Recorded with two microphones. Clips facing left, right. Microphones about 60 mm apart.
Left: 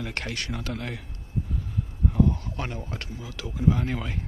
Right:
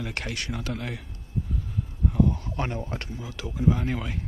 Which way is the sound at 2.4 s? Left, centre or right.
Right.